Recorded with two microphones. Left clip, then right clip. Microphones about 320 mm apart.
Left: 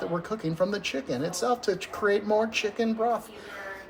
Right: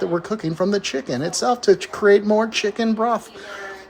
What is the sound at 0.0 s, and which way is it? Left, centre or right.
Speech, right.